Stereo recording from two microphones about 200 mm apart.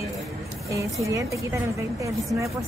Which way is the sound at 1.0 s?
15° right (ahead or behind).